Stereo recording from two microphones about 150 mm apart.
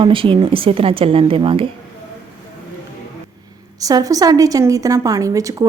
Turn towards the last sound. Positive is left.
turn(degrees=-20)  # may be behind; listen again after turning